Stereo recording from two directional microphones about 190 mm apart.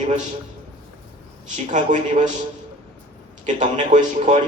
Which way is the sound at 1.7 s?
40° right (ahead or behind).